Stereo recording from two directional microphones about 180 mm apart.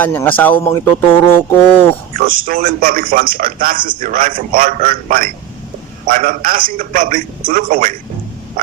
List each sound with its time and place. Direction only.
0.0 s speech: 10° left (ahead or behind)
2.2 s a man's voice: 50° right (ahead or behind)